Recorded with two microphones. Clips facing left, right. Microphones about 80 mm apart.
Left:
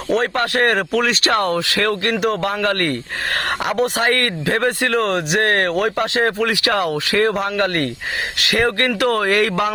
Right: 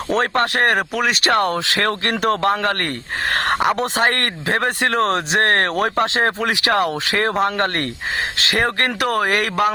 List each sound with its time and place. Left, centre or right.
0.1 s speech: right
0.8 s speech: centre
1.2 s speech: right
3.3 s a sound: right
3.9 s speech: right